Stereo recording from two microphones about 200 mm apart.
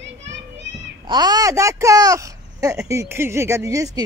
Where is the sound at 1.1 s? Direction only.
20° right (ahead or behind).